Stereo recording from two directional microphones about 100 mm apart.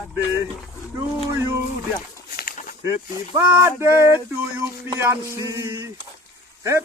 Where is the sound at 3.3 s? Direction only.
20° right (ahead or behind).